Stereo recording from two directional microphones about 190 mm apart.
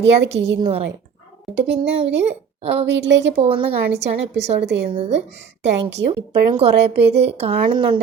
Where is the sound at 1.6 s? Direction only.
70° right (ahead or behind).